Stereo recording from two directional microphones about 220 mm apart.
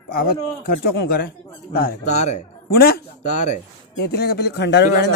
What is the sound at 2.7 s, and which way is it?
Speech, 45° left (ahead or behind).